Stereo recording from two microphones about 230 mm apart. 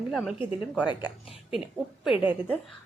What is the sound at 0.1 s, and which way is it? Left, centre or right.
Speech, centre.